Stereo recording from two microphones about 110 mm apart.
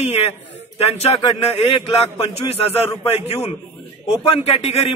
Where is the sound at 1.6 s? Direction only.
60° left (ahead or behind).